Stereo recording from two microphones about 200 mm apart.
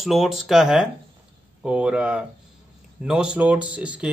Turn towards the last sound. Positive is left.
turn(degrees=-5)  # may be behind; listen again after turning